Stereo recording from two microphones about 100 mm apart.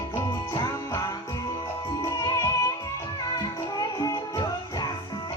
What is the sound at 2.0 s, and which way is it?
Music, 35° left (ahead or behind).